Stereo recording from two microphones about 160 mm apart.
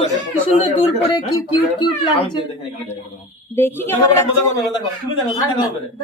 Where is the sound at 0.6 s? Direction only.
30° left (ahead or behind).